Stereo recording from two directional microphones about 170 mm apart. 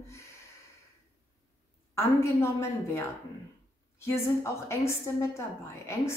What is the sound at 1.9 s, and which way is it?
A woman's voice, 15° left (ahead or behind).